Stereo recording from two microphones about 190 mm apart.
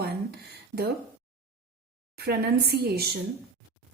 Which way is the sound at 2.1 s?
55° right (ahead or behind).